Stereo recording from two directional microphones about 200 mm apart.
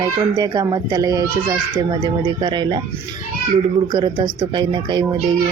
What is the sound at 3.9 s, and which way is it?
A child's voice, 20° right (ahead or behind).